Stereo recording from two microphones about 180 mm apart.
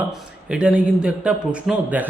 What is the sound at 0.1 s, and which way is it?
A man's voice, 5° right (ahead or behind).